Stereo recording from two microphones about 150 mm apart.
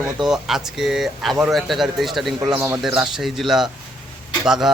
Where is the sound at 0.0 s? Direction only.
5° right (ahead or behind).